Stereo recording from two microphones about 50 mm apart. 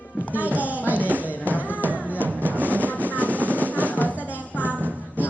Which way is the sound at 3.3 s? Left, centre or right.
Right.